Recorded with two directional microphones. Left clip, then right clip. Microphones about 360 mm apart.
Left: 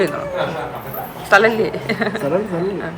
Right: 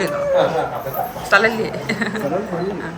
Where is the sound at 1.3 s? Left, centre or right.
Centre.